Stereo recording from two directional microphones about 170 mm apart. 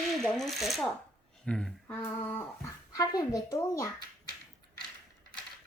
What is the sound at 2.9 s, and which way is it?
Speech, 20° left (ahead or behind).